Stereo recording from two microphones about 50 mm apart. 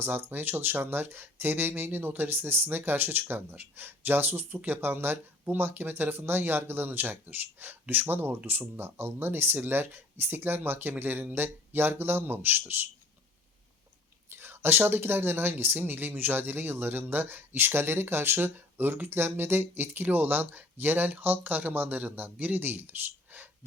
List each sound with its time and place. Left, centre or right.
0.0 s speech: right
14.3 s speech: right